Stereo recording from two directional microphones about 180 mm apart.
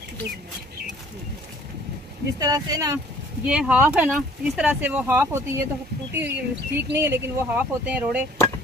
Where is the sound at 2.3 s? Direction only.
20° right (ahead or behind).